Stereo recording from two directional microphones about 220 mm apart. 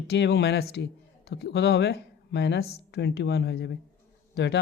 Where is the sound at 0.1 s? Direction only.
50° left (ahead or behind).